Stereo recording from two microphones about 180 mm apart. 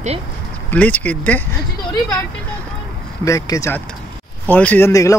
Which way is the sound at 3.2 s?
20° left (ahead or behind).